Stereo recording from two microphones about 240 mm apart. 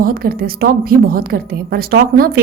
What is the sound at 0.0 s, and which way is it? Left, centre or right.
A woman's voice, right.